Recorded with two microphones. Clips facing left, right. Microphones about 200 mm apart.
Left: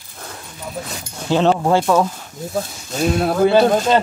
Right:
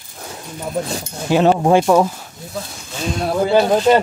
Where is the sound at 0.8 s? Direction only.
30° right (ahead or behind).